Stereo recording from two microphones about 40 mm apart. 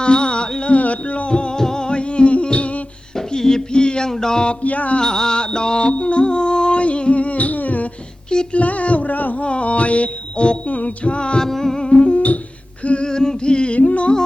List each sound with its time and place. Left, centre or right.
0.0 s music: left
0.7 s music: left
1.5 s humming: centre; by 2.8 s left
3.2 s a sound: centre
4.1 s music: centre
4.6 s music: left
4.9 s music: centre; by 7.9 s left
8.5 s a sound: left
9.4 s music: left
11.3 s music: centre; by 12.2 s left
12.8 s a sound: left
13.1 s a sound: centre
13.7 s music: left